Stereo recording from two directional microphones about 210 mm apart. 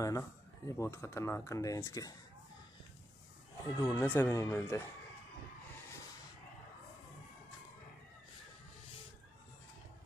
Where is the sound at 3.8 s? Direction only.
10° left (ahead or behind).